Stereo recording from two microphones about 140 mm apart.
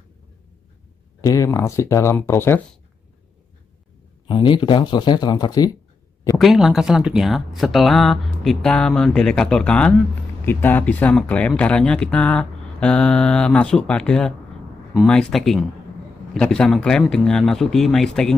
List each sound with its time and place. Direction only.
1.2 s speech: 25° left (ahead or behind)
4.3 s speech: 35° left (ahead or behind)
6.3 s speech: centre (ahead or behind)